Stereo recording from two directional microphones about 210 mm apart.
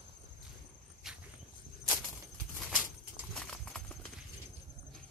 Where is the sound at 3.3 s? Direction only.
5° left (ahead or behind).